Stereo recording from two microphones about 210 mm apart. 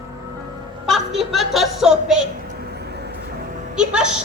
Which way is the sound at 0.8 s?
Centre (ahead or behind).